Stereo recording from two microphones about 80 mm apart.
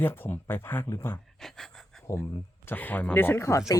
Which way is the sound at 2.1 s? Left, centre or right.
Left.